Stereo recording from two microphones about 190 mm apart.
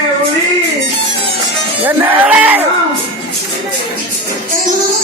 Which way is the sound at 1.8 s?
5° right (ahead or behind).